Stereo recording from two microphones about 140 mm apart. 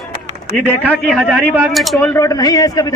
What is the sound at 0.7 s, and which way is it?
A man's voice, 10° left (ahead or behind).